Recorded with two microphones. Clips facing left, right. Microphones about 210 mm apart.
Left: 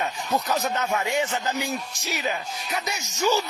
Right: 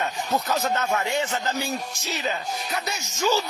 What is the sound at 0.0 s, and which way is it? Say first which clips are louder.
Speech: even; 10° left (ahead or behind).